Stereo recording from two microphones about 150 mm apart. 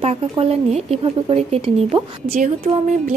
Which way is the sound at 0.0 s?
40° right (ahead or behind).